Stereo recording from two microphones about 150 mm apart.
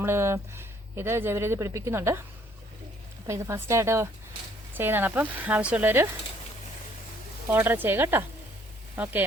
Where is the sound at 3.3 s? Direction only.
15° right (ahead or behind).